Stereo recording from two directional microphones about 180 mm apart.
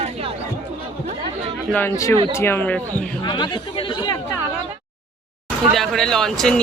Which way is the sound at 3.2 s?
25° left (ahead or behind).